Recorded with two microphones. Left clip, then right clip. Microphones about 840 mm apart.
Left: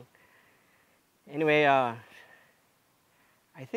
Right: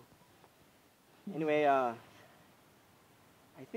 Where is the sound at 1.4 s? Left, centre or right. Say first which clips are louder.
Left 6 dB; left.